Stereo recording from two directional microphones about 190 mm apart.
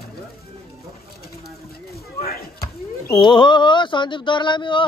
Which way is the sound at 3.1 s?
25° left (ahead or behind).